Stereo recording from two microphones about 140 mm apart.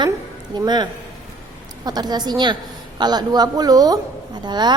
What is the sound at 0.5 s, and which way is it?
A woman's voice, 30° right (ahead or behind).